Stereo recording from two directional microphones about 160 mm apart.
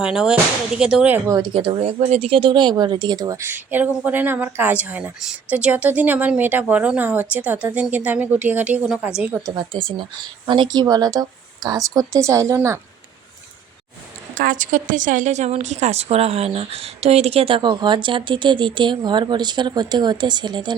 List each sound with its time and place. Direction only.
0.0 s speech: 5° right (ahead or behind)
1.3 s speech: 30° right (ahead or behind); by 9.4 s 5° right (ahead or behind)
9.6 s speech: 30° right (ahead or behind)
14.3 s a woman's voice: 55° right (ahead or behind); by 20.7 s 30° right (ahead or behind)